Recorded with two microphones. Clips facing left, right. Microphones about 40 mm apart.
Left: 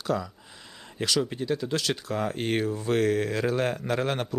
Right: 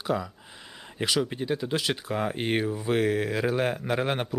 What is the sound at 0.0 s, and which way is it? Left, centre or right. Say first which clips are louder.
Speech: even; centre.